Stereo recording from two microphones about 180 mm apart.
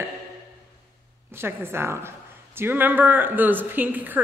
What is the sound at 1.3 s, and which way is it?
A woman's voice, 15° right (ahead or behind).